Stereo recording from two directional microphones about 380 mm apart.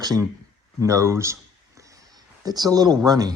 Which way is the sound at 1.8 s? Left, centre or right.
Centre.